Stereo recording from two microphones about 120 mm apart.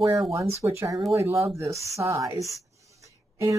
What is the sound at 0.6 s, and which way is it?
Speech, 25° right (ahead or behind).